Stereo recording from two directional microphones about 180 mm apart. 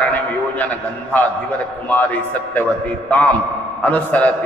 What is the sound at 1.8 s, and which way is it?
A man's voice, 10° left (ahead or behind).